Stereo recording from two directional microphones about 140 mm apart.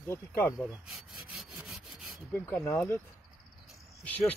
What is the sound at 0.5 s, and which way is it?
Sawing, centre (ahead or behind).